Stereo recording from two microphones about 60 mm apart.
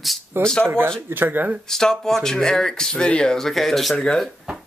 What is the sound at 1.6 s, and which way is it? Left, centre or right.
Speech, centre.